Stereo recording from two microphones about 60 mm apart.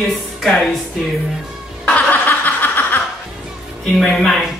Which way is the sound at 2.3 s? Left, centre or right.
Left.